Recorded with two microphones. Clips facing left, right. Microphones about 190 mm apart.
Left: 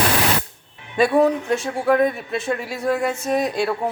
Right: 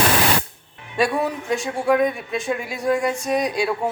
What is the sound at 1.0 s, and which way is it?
Speech, centre (ahead or behind).